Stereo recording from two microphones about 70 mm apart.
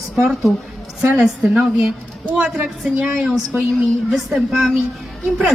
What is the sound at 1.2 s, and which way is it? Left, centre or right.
A woman's voice, centre.